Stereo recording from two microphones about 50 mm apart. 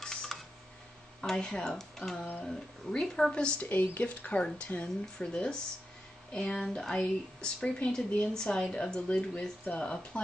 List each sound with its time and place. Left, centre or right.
0.0 s a sound: centre
1.2 s a woman's voice: centre
3.6 s a woman's voice: left
4.8 s a woman's voice: centre